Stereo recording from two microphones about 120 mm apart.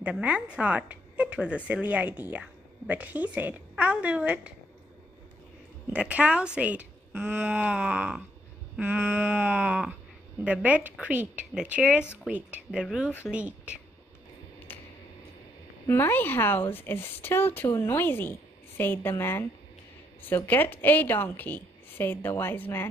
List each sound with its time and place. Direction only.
0.0 s a woman's voice: 10° right (ahead or behind)
5.9 s a woman's voice: 10° right (ahead or behind)
13.3 s a woman's voice: 10° right (ahead or behind)
14.7 s a sound: 15° left (ahead or behind)
15.9 s a woman's voice: 20° left (ahead or behind)